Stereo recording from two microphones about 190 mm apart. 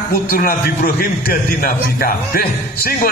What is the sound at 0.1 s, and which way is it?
A man's voice, 50° left (ahead or behind).